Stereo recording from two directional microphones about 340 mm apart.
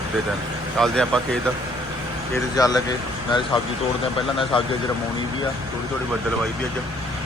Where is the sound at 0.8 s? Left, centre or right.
Centre.